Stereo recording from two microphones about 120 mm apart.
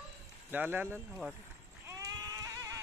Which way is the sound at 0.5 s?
15° right (ahead or behind).